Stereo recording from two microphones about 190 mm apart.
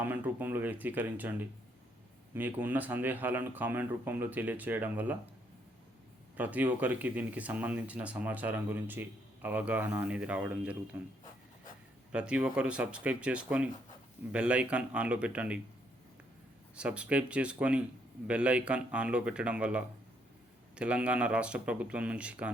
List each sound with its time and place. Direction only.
0.0 s speech: 10° right (ahead or behind)
6.3 s speech: 10° right (ahead or behind)
12.1 s speech: 5° right (ahead or behind)
16.7 s speech: 5° right (ahead or behind)